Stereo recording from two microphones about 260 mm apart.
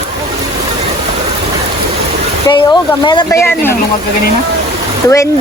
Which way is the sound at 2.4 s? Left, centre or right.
Centre.